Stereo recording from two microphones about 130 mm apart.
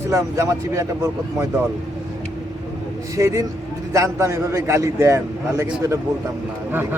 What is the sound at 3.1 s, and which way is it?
A man's voice, 25° right (ahead or behind).